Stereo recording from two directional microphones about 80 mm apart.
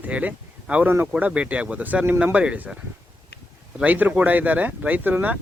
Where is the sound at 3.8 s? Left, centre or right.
Right.